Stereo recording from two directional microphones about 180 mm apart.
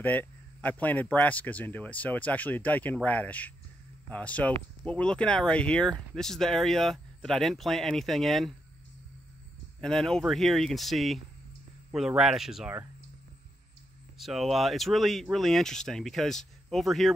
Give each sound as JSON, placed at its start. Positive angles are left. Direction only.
{"t": 0.0, "sound": "speech", "side_deg": 10}
{"t": 9.8, "sound": "speech", "side_deg": 5}
{"t": 14.1, "sound": "speech", "side_deg": 0}